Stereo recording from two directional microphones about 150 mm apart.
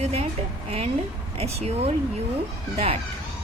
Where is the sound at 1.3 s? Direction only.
45° right (ahead or behind).